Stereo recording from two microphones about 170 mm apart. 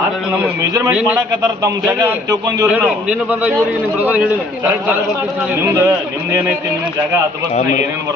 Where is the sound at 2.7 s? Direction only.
5° right (ahead or behind).